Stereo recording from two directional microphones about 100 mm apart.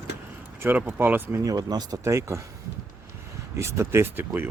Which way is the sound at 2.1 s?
30° right (ahead or behind).